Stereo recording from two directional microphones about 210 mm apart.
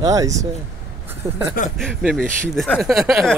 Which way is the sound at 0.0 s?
15° right (ahead or behind).